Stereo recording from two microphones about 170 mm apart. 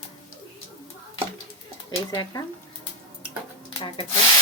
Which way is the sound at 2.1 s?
25° left (ahead or behind).